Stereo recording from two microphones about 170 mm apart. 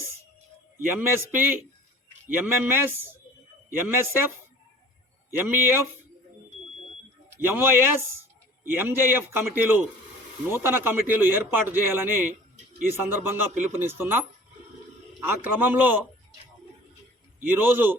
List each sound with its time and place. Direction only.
0.9 s a man's voice: 10° right (ahead or behind)
5.4 s a man's voice: 15° right (ahead or behind)
7.3 s a man's voice: 15° right (ahead or behind)
15.2 s a man's voice: 10° right (ahead or behind)
17.4 s a man's voice: 15° right (ahead or behind)